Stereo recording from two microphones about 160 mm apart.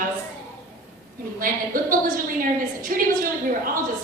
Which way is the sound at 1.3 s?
60° right (ahead or behind).